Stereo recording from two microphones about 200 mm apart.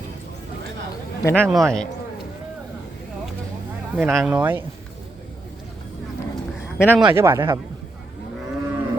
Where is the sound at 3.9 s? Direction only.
5° right (ahead or behind).